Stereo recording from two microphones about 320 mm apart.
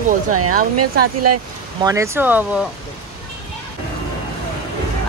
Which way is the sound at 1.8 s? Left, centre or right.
Centre.